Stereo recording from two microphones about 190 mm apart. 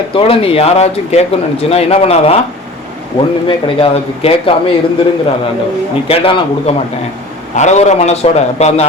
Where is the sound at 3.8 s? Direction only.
30° left (ahead or behind).